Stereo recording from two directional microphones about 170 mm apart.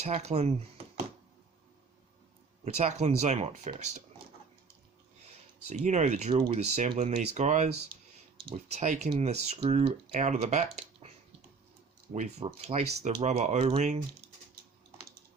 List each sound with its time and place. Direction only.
0.0 s speech: 40° right (ahead or behind)
2.6 s speech: 40° right (ahead or behind)
5.6 s speech: 45° right (ahead or behind)
12.1 s speech: 45° right (ahead or behind)